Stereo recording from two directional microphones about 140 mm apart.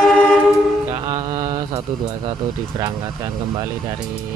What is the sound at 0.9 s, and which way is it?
Music, 25° right (ahead or behind).